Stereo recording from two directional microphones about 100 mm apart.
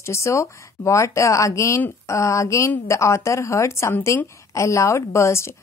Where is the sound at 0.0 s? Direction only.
30° left (ahead or behind).